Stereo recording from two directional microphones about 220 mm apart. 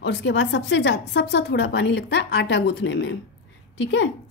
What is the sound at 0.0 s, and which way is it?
A woman's voice, 55° left (ahead or behind).